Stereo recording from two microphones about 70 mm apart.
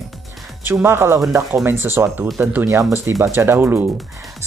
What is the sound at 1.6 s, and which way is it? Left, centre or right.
Speech, right.